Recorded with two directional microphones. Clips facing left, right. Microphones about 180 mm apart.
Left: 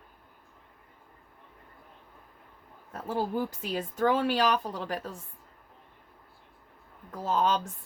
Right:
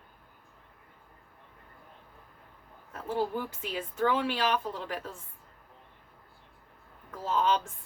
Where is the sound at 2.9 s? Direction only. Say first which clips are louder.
Left 1 dB; 40° left (ahead or behind).